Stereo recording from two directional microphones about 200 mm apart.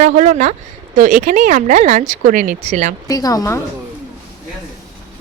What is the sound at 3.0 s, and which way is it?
Speech, 20° left (ahead or behind).